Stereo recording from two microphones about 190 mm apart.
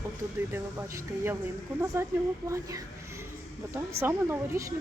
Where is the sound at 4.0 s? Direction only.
10° right (ahead or behind).